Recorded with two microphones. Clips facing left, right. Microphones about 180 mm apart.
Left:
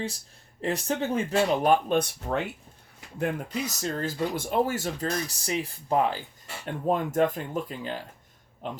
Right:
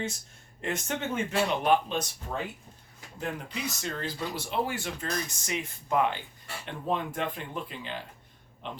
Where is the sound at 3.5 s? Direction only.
40° left (ahead or behind).